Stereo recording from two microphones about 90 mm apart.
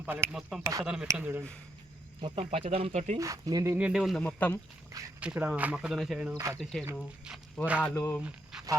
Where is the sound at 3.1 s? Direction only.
40° right (ahead or behind).